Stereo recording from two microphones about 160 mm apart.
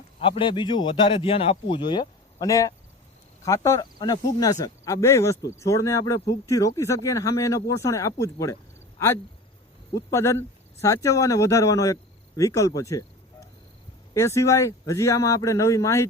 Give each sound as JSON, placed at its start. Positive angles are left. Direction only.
{"t": 0.2, "sound": "speech", "side_deg": 35}
{"t": 9.9, "sound": "speech", "side_deg": 15}